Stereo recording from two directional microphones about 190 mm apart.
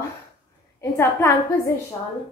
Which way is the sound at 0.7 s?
15° left (ahead or behind).